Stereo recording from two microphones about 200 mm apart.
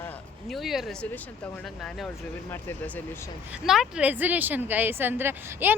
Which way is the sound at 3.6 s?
Centre (ahead or behind).